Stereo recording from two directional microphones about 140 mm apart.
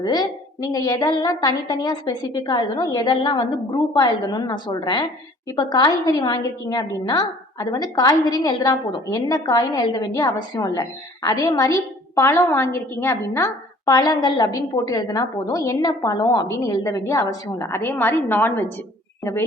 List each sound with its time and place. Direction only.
0.0 s a woman's voice: 30° left (ahead or behind)